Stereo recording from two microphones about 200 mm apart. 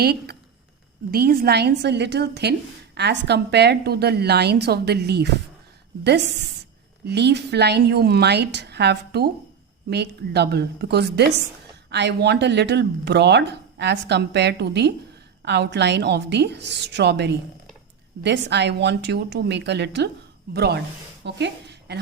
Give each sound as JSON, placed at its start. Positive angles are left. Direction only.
{"t": 0.0, "sound": "a woman's voice", "side_deg": -50}
{"t": 7.0, "sound": "a woman's voice", "side_deg": -55}